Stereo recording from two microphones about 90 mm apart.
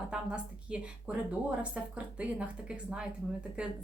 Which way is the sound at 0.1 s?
10° right (ahead or behind).